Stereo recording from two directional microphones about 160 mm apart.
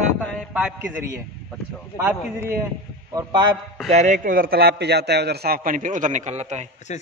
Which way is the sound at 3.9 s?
50° right (ahead or behind).